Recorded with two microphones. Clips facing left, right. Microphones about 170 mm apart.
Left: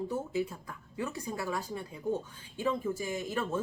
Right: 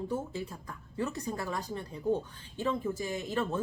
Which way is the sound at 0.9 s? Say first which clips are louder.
Right 2 dB; 10° left (ahead or behind).